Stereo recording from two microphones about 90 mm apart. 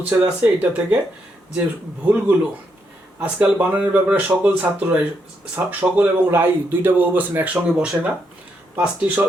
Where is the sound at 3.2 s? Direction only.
20° right (ahead or behind).